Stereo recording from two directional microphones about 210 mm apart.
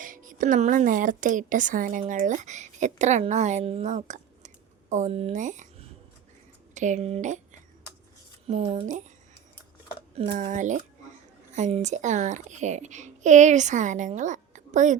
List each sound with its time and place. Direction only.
0.0 s a woman's voice: 40° right (ahead or behind)
8.4 s a child's voice: 30° right (ahead or behind)
10.2 s a child's voice: 30° right (ahead or behind)